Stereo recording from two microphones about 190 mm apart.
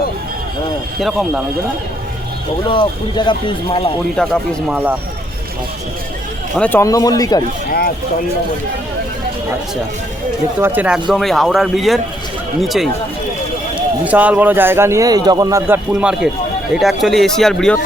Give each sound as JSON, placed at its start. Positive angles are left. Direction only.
{"t": 0.9, "sound": "speech", "side_deg": 0}
{"t": 2.6, "sound": "speech", "side_deg": 25}
{"t": 4.2, "sound": "speech", "side_deg": 5}
{"t": 4.7, "sound": "speech", "side_deg": -10}
{"t": 6.6, "sound": "speech", "side_deg": 10}
{"t": 10.6, "sound": "speech", "side_deg": -10}
{"t": 14.0, "sound": "speech", "side_deg": -5}